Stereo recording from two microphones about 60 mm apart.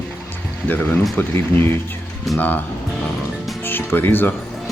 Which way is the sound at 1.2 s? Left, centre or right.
Left.